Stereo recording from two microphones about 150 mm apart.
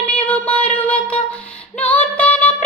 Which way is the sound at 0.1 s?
10° left (ahead or behind).